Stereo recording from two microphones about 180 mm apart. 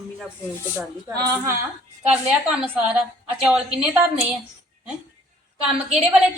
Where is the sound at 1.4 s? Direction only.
15° right (ahead or behind).